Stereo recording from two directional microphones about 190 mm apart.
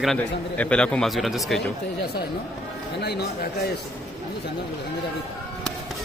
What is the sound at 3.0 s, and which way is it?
Speech, 60° left (ahead or behind).